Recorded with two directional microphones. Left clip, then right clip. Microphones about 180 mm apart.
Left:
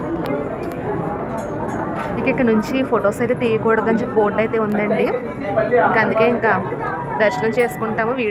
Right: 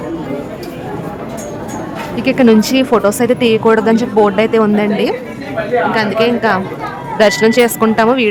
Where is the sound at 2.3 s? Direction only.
45° right (ahead or behind).